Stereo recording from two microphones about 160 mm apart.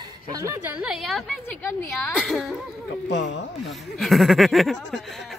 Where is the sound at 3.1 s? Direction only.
90° left.